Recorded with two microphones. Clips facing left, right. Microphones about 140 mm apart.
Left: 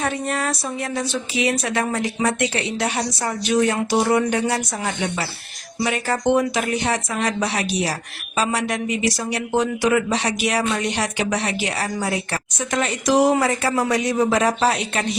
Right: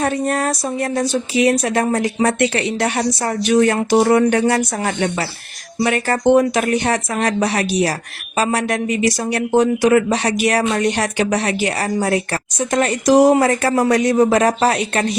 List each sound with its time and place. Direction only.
0.0 s speech: 45° right (ahead or behind)